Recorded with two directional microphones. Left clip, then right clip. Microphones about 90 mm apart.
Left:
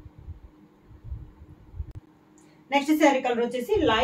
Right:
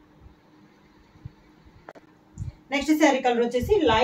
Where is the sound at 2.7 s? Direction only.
15° left (ahead or behind).